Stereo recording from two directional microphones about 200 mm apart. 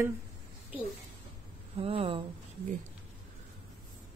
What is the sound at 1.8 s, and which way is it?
Speech, 30° right (ahead or behind).